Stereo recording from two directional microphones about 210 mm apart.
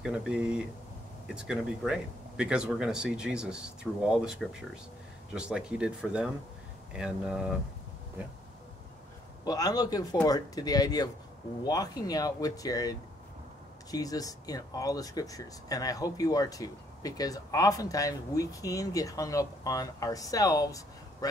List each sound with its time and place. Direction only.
0.0 s speech: 5° right (ahead or behind)
9.4 s speech: 20° left (ahead or behind)